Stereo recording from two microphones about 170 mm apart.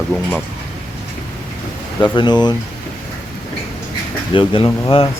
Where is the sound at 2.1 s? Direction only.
25° left (ahead or behind).